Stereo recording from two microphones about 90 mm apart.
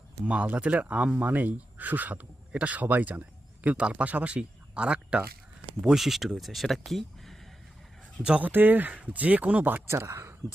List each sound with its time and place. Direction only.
0.3 s speech: 15° right (ahead or behind); by 7.3 s centre (ahead or behind)
8.2 s speech: 15° right (ahead or behind); by 10.3 s 30° right (ahead or behind)